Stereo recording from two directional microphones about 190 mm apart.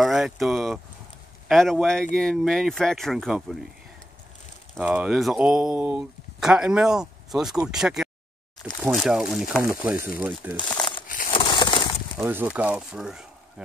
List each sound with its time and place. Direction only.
0.0 s speech: centre (ahead or behind)
4.7 s speech: 10° right (ahead or behind)
10.7 s crumpling: 25° left (ahead or behind)
11.1 s crushing: 45° left (ahead or behind)
11.3 s crushing: 25° left (ahead or behind)
12.2 s speech: 10° right (ahead or behind)